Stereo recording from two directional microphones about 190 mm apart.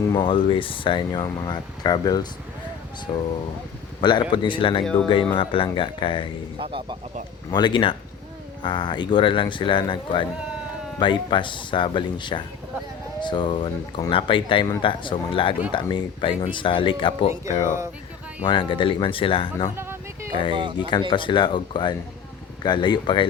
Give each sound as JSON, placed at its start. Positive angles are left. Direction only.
{"t": 0.1, "sound": "speech", "side_deg": 25}
{"t": 6.6, "sound": "speech", "side_deg": -25}
{"t": 7.5, "sound": "speech", "side_deg": 25}
{"t": 18.4, "sound": "speech", "side_deg": 25}
{"t": 19.7, "sound": "a sound", "side_deg": -15}
{"t": 20.3, "sound": "speech", "side_deg": 25}